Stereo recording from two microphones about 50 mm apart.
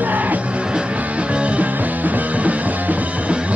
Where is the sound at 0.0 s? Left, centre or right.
Right.